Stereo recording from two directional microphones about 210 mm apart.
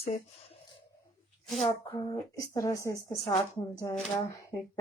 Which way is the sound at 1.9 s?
15° left (ahead or behind).